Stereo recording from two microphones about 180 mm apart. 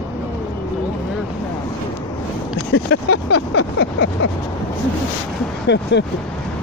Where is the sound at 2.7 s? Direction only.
85° left.